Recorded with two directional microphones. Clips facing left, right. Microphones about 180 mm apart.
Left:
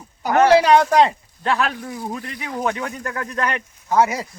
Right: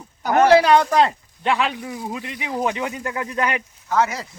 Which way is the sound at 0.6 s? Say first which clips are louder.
Left 1 dB; 5° left (ahead or behind).